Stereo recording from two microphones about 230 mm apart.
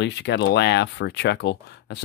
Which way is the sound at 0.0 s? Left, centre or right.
Left.